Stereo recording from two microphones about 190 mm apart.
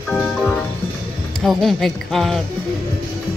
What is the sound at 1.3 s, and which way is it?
Speech, centre (ahead or behind).